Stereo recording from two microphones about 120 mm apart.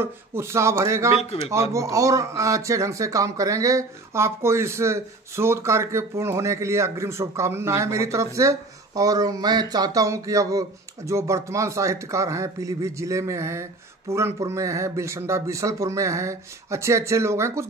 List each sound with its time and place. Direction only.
0.0 s speech: 20° right (ahead or behind)